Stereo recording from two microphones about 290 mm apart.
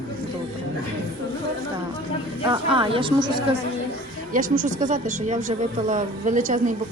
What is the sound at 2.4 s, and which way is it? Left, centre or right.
A woman's voice, centre.